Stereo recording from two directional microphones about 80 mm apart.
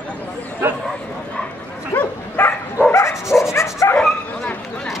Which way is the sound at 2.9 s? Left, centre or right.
Left.